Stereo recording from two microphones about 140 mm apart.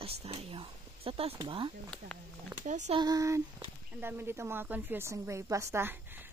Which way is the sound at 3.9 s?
15° right (ahead or behind).